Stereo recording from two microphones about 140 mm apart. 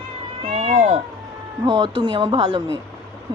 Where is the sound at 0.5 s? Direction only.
55° right (ahead or behind).